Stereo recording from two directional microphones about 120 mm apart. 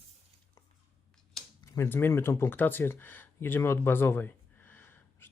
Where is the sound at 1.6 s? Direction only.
20° left (ahead or behind).